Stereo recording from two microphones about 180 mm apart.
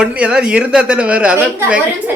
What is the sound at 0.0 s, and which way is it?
Speech, 5° right (ahead or behind).